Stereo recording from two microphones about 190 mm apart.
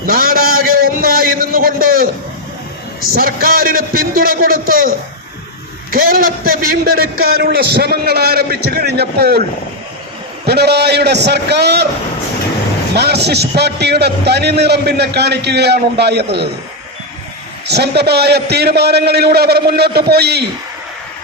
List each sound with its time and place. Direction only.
0.0 s a sound: 50° right (ahead or behind)
3.1 s a man's voice: 50° right (ahead or behind)
10.4 s a man's voice: 60° right (ahead or behind)
13.0 s a man's voice: 60° right (ahead or behind)
17.7 s a man's voice: 60° right (ahead or behind)